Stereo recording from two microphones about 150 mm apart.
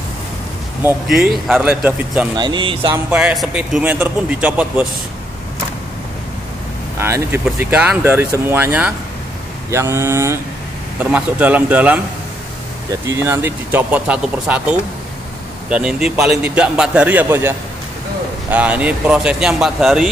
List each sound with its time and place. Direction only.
1.0 s speech: 5° right (ahead or behind)
2.3 s speech: 30° right (ahead or behind)
3.1 s speech: 10° right (ahead or behind)
7.0 s speech: 15° right (ahead or behind)
13.0 s speech: 20° right (ahead or behind)